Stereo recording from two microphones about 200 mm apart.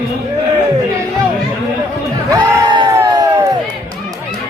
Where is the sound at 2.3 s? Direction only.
20° right (ahead or behind).